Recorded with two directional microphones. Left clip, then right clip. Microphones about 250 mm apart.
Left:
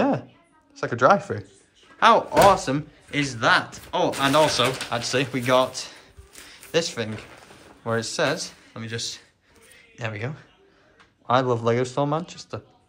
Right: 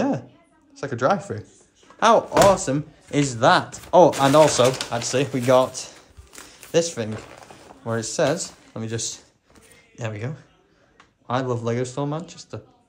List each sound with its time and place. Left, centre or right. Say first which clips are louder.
0.7 s speech: left 3 dB; centre